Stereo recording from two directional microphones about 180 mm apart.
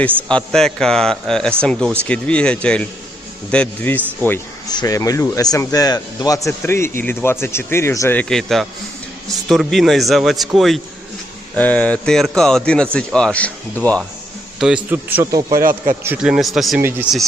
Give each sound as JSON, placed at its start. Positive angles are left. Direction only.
{"t": 0.3, "sound": "a man's voice", "side_deg": 5}
{"t": 4.7, "sound": "a man's voice", "side_deg": 20}
{"t": 14.8, "sound": "speech", "side_deg": -10}
{"t": 16.1, "sound": "a man's voice", "side_deg": -5}